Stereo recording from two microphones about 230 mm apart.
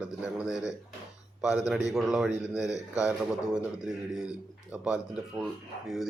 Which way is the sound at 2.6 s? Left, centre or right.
Centre.